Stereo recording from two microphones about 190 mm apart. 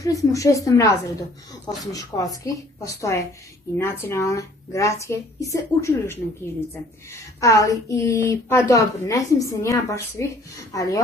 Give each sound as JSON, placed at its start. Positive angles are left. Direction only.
{"t": 0.0, "sound": "a woman's voice", "side_deg": 15}